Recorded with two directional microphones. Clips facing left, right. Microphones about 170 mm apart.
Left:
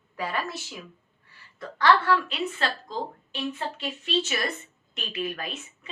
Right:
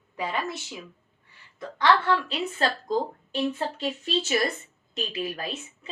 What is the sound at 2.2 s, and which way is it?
A woman's voice, 40° right (ahead or behind).